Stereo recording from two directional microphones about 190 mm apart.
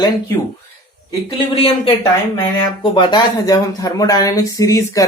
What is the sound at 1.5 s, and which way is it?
Speech, 30° left (ahead or behind).